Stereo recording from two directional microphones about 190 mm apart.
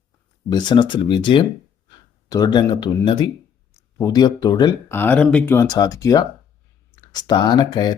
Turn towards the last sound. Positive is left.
turn(degrees=20)  # may be behind; listen again after turning